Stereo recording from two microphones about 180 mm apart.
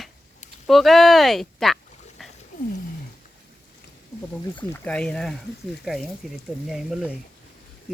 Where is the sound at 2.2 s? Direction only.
Centre (ahead or behind).